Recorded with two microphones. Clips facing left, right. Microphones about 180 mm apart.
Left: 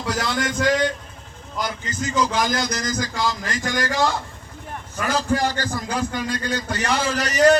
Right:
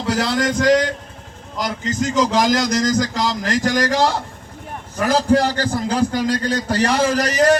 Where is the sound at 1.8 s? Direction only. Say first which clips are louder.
Right 6 dB; 90° right.